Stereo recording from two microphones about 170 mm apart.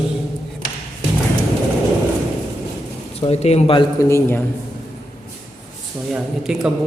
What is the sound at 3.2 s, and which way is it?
Speech, 40° left (ahead or behind).